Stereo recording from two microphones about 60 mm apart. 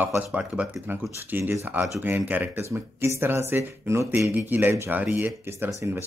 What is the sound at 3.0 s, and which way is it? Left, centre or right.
Speech, right.